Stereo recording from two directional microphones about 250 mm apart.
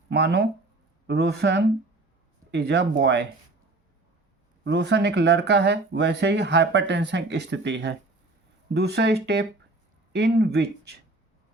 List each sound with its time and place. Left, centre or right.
0.1 s speech: right
4.6 s speech: right